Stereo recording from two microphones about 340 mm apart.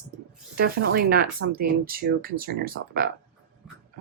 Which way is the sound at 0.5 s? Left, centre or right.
Right.